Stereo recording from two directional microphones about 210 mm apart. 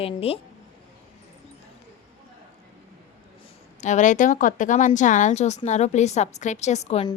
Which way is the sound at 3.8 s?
35° left (ahead or behind).